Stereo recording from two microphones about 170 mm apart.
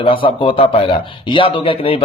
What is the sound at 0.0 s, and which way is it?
Speech, 30° left (ahead or behind).